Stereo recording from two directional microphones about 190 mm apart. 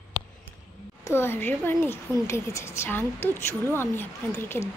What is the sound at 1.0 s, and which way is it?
Speech, 10° left (ahead or behind).